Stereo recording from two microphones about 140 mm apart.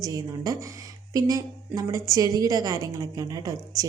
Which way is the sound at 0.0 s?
25° right (ahead or behind).